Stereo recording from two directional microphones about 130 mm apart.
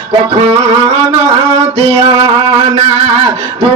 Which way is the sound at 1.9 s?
35° right (ahead or behind).